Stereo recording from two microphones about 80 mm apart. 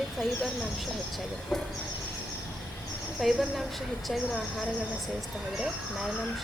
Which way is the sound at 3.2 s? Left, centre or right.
Centre.